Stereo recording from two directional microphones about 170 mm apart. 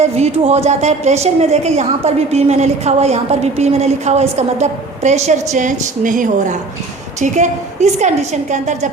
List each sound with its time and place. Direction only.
0.0 s a woman's voice: 35° right (ahead or behind)